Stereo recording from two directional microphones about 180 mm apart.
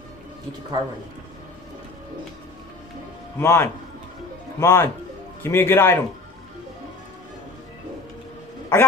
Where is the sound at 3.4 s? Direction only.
15° left (ahead or behind).